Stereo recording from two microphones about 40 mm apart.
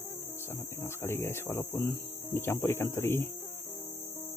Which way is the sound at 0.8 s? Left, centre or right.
Left.